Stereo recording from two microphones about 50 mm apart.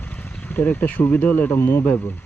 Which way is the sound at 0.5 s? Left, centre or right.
Left.